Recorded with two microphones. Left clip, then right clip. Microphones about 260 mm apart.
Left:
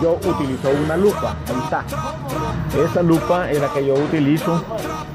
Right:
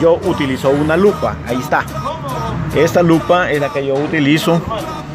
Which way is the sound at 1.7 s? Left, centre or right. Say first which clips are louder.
Right 6 dB; centre.